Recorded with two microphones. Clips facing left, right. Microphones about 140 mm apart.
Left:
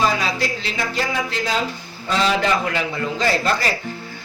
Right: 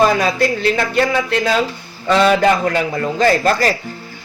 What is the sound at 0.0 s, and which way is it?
A man's voice, 50° right (ahead or behind).